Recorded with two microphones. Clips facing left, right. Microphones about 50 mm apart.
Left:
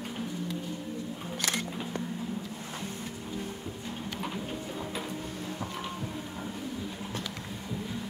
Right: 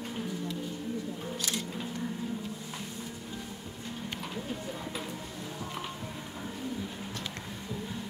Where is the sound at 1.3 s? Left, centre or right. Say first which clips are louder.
Left 5 dB; left.